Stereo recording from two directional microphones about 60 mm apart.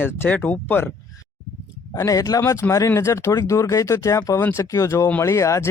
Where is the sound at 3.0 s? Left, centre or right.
Left.